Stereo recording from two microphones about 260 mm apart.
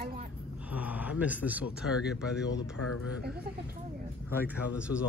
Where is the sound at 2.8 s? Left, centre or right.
Left.